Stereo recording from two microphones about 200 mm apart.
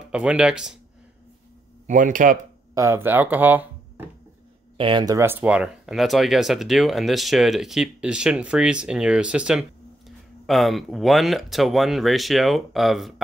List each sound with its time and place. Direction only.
0.1 s speech: 5° right (ahead or behind)
1.9 s speech: 40° right (ahead or behind)
2.7 s speech: 15° right (ahead or behind)
4.7 s speech: 25° right (ahead or behind); by 13.1 s centre (ahead or behind)